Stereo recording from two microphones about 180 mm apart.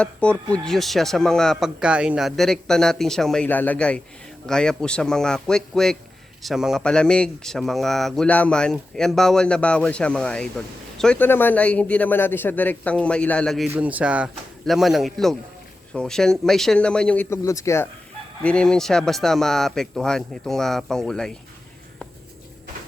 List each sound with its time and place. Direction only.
0.0 s a man's voice: 5° left (ahead or behind)
13.7 s speech: 10° right (ahead or behind); by 17.8 s 15° left (ahead or behind)
18.4 s speech: 5° left (ahead or behind)